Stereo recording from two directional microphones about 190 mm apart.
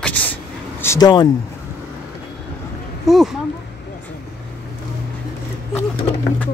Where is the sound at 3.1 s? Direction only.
Centre (ahead or behind).